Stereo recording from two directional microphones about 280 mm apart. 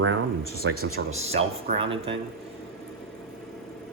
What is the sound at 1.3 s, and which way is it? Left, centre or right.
Speech, centre.